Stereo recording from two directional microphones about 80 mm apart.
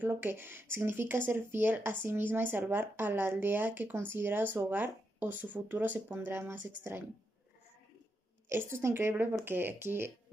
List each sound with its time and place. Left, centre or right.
0.0 s speech: right
8.5 s speech: right